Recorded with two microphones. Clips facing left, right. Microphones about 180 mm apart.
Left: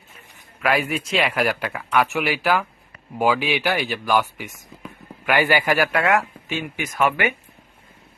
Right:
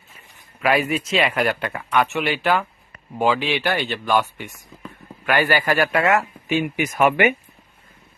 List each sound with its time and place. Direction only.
0.6 s speech: centre (ahead or behind)
6.5 s speech: 15° right (ahead or behind)